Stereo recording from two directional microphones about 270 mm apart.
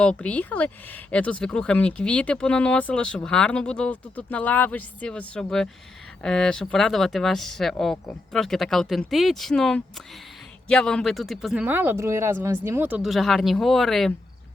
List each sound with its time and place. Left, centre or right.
0.0 s speech: centre